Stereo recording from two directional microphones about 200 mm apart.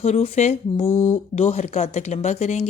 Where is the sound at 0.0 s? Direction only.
30° left (ahead or behind).